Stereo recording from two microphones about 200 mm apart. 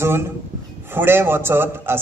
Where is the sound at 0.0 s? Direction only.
10° right (ahead or behind).